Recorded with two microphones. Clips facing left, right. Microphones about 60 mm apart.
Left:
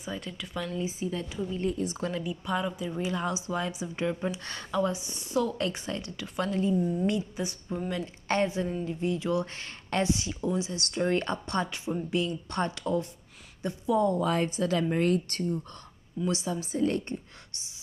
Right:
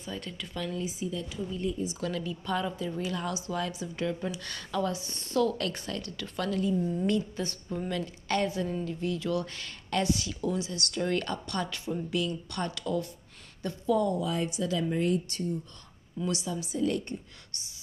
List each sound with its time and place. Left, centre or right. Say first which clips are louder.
0.0 s a woman's voice: left 2 dB; centre
0.7 s speech: left 4 dB; left
2.0 s speech: left 1 dB; left
4.7 s a woman's voice: left 2 dB; centre
7.9 s speech: left 1 dB; left
14.1 s speech: left 3 dB; left
16.3 s speech: left 2 dB; left